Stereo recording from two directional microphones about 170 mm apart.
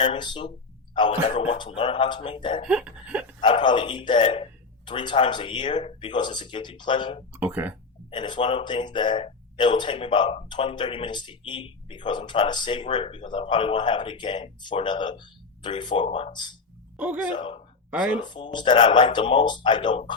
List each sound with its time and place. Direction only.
0.0 s speech: 30° left (ahead or behind)
2.6 s laughter: 5° right (ahead or behind)
3.4 s speech: 30° left (ahead or behind)
7.3 s speech: 10° right (ahead or behind)
8.1 s speech: 30° left (ahead or behind)
17.0 s speech: 10° right (ahead or behind)
17.3 s speech: 30° left (ahead or behind)